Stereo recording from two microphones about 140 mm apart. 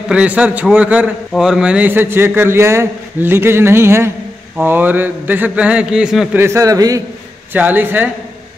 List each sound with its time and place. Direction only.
0.1 s a man's voice: 10° right (ahead or behind)
6.4 s a man's voice: 20° right (ahead or behind)
7.5 s a man's voice: 15° right (ahead or behind)